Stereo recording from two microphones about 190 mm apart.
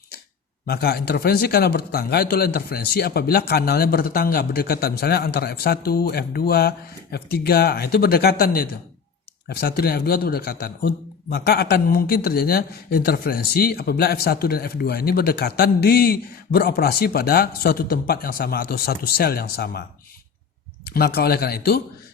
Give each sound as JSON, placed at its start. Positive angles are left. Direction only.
{"t": 0.7, "sound": "speech", "side_deg": 55}
{"t": 20.8, "sound": "speech", "side_deg": 55}